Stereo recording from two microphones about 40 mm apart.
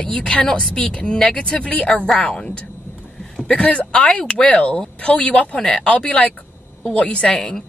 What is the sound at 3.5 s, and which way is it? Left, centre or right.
Speech, left.